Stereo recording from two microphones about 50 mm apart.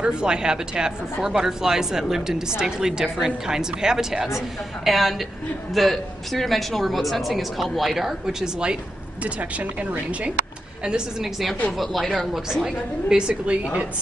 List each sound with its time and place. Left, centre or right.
0.0 s a woman's voice: centre
9.2 s a woman's voice: right
10.9 s a woman's voice: centre; by 13.6 s right